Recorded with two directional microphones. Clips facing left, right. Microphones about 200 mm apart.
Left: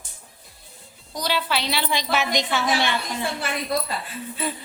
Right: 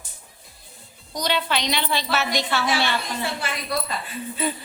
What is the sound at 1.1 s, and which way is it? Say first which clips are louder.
A woman's voice: right 1 dB; 5° left (ahead or behind).